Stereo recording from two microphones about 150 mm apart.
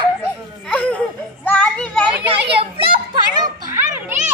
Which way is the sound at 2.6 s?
30° right (ahead or behind).